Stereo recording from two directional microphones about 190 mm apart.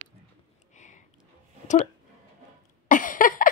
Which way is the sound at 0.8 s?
40° left (ahead or behind).